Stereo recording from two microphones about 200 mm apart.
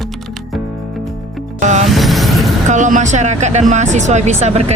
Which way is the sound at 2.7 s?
40° right (ahead or behind).